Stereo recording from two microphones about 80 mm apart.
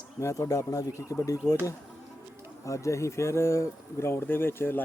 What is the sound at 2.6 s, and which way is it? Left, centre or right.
Speech, left.